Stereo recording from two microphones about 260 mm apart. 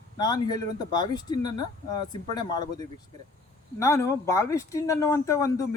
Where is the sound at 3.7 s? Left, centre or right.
Centre.